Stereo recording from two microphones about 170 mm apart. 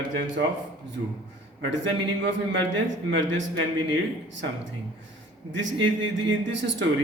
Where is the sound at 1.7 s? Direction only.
90° right.